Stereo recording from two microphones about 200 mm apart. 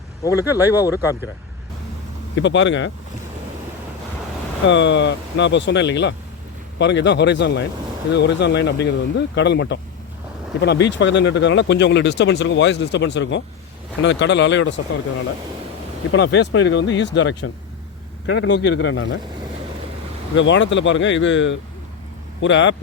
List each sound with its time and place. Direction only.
0.3 s speech: 10° right (ahead or behind)
2.3 s speech: 65° left (ahead or behind)
4.6 s speech: 65° left (ahead or behind)
16.1 s speech: 60° left (ahead or behind)
20.3 s speech: 65° left (ahead or behind)